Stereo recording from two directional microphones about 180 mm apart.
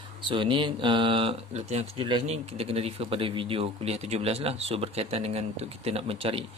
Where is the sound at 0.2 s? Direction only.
25° right (ahead or behind).